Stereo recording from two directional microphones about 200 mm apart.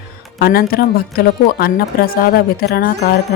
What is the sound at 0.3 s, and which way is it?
A woman's voice, 50° left (ahead or behind).